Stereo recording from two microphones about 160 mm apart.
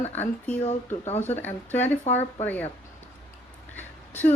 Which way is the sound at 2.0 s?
45° left (ahead or behind).